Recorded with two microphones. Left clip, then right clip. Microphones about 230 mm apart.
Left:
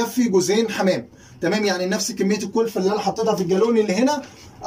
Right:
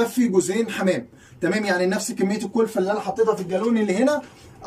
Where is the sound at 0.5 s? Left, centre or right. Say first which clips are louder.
Left 3 dB; centre.